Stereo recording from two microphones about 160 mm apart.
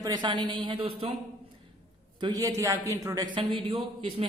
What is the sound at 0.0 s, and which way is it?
A man's voice, 25° right (ahead or behind).